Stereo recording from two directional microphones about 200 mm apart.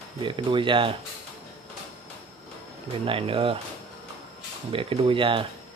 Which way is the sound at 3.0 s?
25° right (ahead or behind).